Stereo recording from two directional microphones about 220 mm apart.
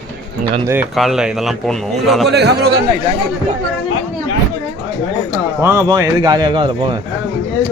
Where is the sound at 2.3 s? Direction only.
50° right (ahead or behind).